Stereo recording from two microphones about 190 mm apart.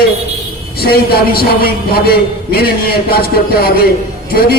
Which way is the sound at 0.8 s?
55° left (ahead or behind).